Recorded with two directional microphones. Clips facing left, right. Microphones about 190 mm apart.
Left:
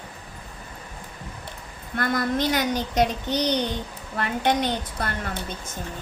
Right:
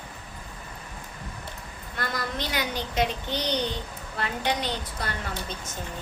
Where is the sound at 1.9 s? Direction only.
50° left (ahead or behind).